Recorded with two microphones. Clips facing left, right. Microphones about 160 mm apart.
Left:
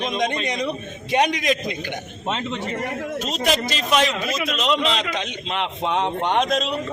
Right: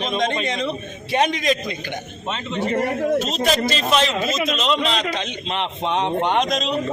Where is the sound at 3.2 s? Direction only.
15° left (ahead or behind).